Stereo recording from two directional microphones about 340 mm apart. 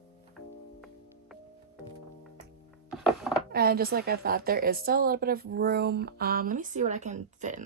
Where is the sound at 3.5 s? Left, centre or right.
Right.